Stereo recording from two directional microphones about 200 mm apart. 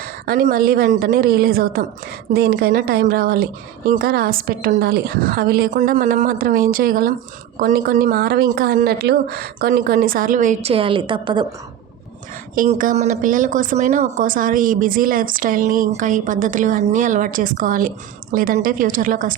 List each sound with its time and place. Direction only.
0.0 s speech: 45° right (ahead or behind); by 11.4 s 25° right (ahead or behind)
12.5 s a woman's voice: 40° right (ahead or behind)